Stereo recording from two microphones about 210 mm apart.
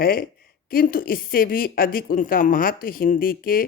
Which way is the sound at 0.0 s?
45° left (ahead or behind).